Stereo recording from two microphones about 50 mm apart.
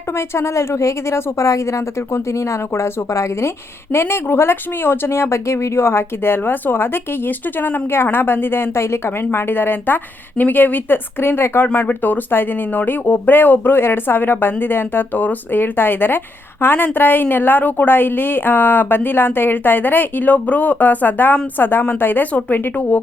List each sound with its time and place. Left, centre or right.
0.2 s speech: left
3.9 s speech: left
22.3 s speech: left